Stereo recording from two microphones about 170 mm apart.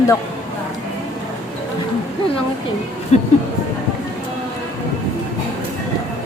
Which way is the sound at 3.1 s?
40° left (ahead or behind).